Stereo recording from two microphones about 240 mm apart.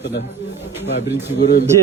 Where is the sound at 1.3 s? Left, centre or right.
Left.